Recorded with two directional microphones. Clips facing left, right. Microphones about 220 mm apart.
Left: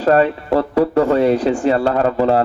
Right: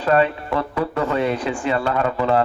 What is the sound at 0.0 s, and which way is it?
A man's voice, 40° left (ahead or behind).